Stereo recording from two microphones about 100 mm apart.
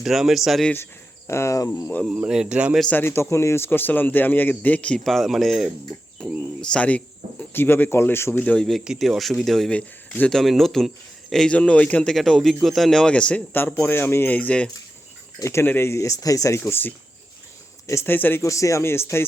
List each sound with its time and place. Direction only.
0.0 s speech: 5° right (ahead or behind)
1.3 s speech: 30° left (ahead or behind)
2.0 s speech: 10° right (ahead or behind)
2.9 s a man's voice: 25° left (ahead or behind)
8.5 s a man's voice: 5° left (ahead or behind)
15.4 s speech: 30° left (ahead or behind)
18.4 s speech: 30° left (ahead or behind)